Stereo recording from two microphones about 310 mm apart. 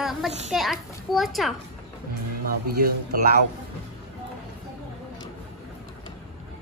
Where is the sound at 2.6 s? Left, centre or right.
Right.